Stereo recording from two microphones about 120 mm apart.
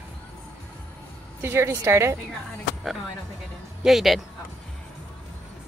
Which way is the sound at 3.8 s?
Centre (ahead or behind).